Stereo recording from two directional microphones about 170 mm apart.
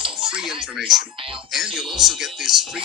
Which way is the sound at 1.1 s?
30° right (ahead or behind).